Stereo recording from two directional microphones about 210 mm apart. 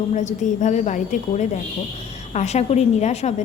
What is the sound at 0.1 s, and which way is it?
A woman's voice, 35° left (ahead or behind).